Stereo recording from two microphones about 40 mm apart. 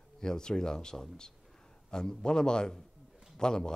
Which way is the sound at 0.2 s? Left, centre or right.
Centre.